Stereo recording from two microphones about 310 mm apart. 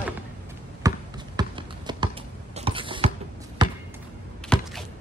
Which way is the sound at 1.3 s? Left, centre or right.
Centre.